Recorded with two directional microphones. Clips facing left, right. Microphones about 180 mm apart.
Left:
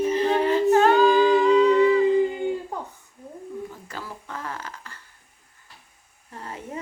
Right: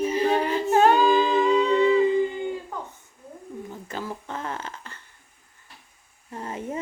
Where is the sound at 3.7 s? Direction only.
20° right (ahead or behind).